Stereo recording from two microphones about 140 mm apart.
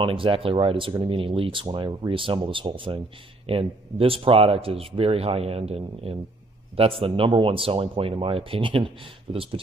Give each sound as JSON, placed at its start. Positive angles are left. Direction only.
{"t": 0.0, "sound": "speech", "side_deg": -40}